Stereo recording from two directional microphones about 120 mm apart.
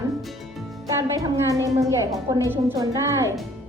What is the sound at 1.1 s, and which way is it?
A woman's voice, 30° right (ahead or behind).